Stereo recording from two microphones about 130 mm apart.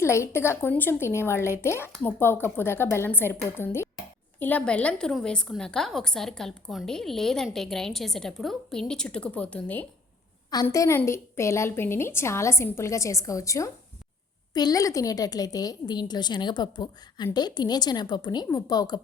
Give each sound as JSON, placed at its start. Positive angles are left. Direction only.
{"t": 0.0, "sound": "a woman's voice", "side_deg": 20}
{"t": 10.5, "sound": "a woman's voice", "side_deg": 30}